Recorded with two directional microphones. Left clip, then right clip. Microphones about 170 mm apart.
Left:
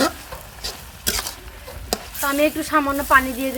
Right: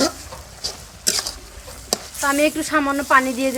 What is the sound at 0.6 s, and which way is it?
Stir, centre (ahead or behind).